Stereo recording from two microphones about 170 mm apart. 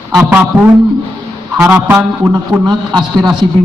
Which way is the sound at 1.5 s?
10° right (ahead or behind).